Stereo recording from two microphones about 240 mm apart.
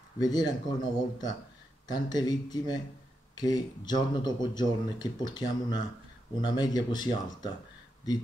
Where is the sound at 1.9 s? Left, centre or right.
Centre.